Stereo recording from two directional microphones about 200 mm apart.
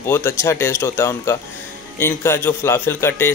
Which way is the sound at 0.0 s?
15° left (ahead or behind).